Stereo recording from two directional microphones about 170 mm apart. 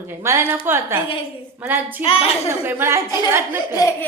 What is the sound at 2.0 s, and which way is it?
Speech, 35° left (ahead or behind).